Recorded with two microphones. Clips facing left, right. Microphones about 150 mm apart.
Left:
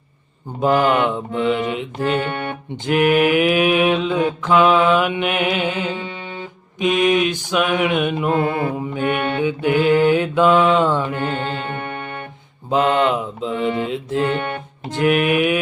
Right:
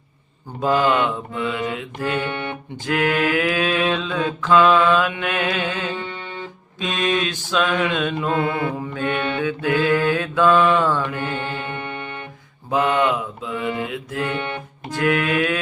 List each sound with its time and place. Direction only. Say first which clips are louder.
0.6 s mantra: left 2 dB; 20° left (ahead or behind)
11.8 s music: left 2 dB; 50° left (ahead or behind)
12.7 s mantra: left 2 dB; 20° left (ahead or behind)